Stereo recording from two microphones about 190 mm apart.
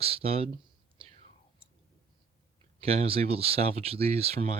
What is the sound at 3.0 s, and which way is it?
Speech, 30° right (ahead or behind).